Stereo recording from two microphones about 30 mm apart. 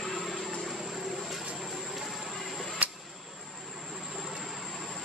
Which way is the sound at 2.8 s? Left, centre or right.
Right.